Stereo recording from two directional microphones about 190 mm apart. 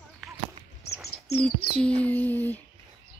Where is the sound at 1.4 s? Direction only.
5° left (ahead or behind).